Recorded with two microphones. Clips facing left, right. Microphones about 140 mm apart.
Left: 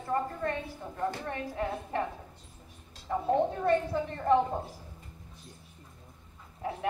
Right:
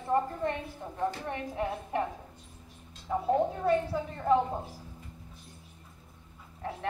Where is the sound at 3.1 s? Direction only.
5° right (ahead or behind).